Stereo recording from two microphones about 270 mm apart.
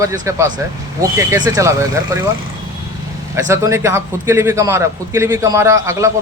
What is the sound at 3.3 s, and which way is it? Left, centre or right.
A man's voice, centre.